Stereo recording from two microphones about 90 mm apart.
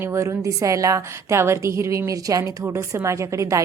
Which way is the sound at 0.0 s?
35° right (ahead or behind).